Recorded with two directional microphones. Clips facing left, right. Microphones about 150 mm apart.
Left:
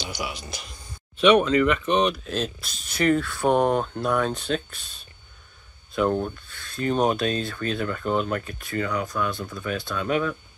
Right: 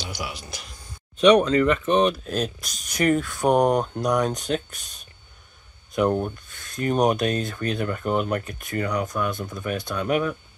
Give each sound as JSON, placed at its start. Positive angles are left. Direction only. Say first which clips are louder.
{"t": 0.0, "sound": "speech", "louder": "left 1 dB", "side_deg": -5}
{"t": 1.2, "sound": "speech", "louder": "right 1 dB", "side_deg": -40}
{"t": 2.9, "sound": "speech", "louder": "even", "side_deg": -15}
{"t": 5.9, "sound": "speech", "louder": "right 1 dB", "side_deg": -15}